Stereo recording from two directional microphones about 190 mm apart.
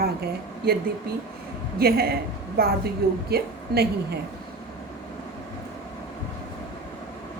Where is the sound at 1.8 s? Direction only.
55° right (ahead or behind).